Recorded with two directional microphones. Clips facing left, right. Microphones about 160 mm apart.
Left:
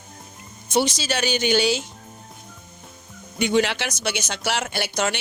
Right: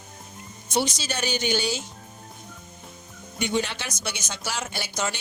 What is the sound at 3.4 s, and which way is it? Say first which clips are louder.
Speech: left 6 dB; 90° left.